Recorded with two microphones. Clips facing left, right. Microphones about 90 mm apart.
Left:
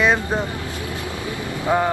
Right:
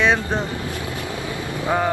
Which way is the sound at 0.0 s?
5° left (ahead or behind).